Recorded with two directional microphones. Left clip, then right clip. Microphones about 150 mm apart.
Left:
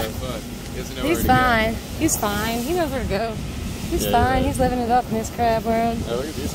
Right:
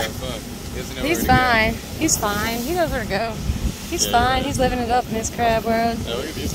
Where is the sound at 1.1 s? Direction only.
25° left (ahead or behind).